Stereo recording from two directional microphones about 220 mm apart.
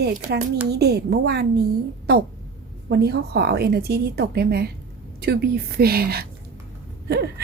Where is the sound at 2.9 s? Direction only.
45° right (ahead or behind).